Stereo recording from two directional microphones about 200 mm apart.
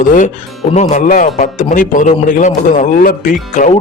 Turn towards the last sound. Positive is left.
turn(degrees=40)  # may be behind; listen again after turning